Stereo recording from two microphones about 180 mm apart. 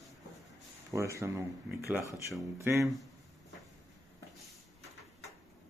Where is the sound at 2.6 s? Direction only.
15° right (ahead or behind).